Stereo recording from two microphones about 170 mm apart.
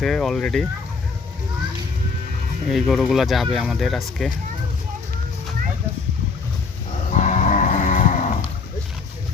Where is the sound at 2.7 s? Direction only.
Centre (ahead or behind).